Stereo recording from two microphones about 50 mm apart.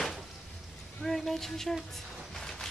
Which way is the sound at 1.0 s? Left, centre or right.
Centre.